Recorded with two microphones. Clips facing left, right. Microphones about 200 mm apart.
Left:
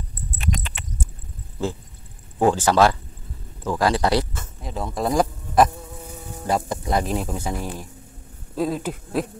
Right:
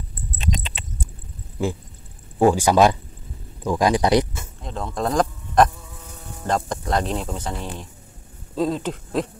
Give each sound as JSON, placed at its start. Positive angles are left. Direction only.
{"t": 0.4, "sound": "a sound", "side_deg": -20}
{"t": 1.6, "sound": "speech", "side_deg": -15}
{"t": 4.6, "sound": "speech", "side_deg": 5}